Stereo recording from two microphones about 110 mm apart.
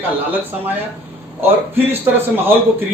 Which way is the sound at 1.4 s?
20° right (ahead or behind).